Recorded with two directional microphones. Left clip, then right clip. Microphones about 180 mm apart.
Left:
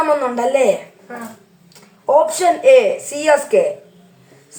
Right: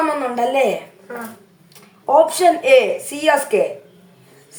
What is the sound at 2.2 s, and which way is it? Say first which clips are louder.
A woman's voice: left 2 dB; 15° right (ahead or behind).